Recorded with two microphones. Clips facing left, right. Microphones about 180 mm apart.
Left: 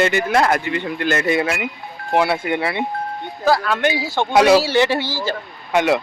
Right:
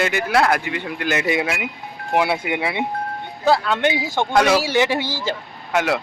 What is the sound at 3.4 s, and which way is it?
Speech, 20° right (ahead or behind).